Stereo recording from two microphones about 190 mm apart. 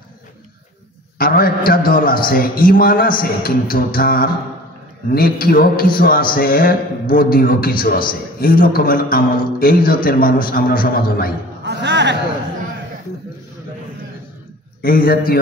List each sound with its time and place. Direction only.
1.1 s a man's voice: 50° left (ahead or behind)
11.6 s a sound: 65° right (ahead or behind)
14.8 s a man's voice: 50° left (ahead or behind)